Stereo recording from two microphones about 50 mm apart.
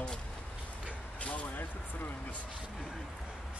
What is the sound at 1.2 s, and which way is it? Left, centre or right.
Speech, left.